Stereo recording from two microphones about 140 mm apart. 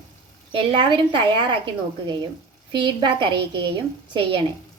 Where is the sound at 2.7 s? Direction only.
35° right (ahead or behind).